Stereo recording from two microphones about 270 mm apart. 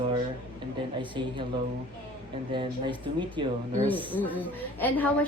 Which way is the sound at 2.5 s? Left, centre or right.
Centre.